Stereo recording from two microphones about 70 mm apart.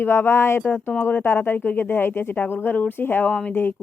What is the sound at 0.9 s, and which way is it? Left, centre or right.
Speech, left.